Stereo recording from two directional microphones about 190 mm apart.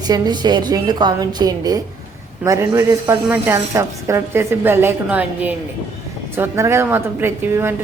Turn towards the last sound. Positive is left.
turn(degrees=-10)  # may be behind; listen again after turning